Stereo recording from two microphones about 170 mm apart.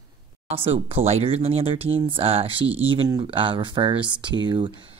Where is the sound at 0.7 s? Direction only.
35° right (ahead or behind).